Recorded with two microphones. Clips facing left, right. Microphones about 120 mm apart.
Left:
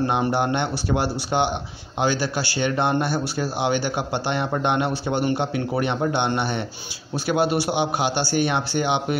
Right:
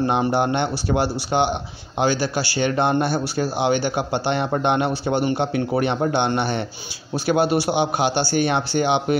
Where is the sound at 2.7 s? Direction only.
25° right (ahead or behind).